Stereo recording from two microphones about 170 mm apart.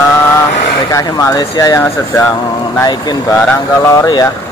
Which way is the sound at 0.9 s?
20° left (ahead or behind).